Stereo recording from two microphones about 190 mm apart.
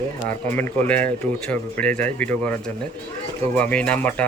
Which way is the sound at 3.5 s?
5° left (ahead or behind).